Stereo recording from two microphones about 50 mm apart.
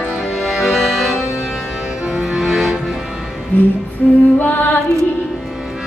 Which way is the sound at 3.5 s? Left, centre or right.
Left.